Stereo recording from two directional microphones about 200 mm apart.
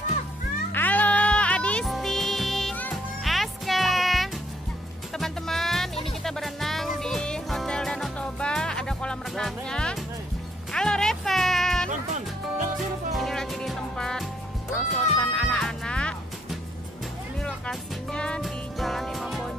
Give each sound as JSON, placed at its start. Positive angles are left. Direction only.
{"t": 0.7, "sound": "music", "side_deg": 10}
{"t": 11.9, "sound": "music", "side_deg": -40}
{"t": 13.1, "sound": "music", "side_deg": 0}
{"t": 17.4, "sound": "music", "side_deg": 5}